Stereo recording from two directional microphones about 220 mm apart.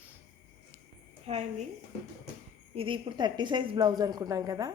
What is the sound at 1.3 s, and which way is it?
Speech, 30° right (ahead or behind).